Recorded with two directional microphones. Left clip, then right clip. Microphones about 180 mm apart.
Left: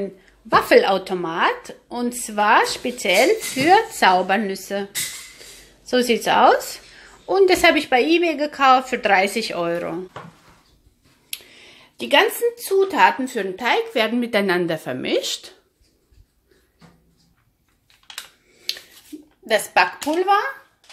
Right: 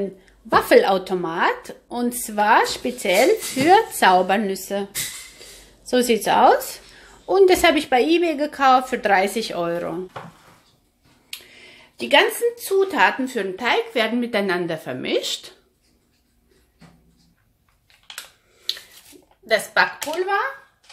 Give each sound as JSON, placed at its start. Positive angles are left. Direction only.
{"t": 0.0, "sound": "speech", "side_deg": -5}
{"t": 5.9, "sound": "speech", "side_deg": -5}
{"t": 11.5, "sound": "speech", "side_deg": 10}
{"t": 19.4, "sound": "speech", "side_deg": 35}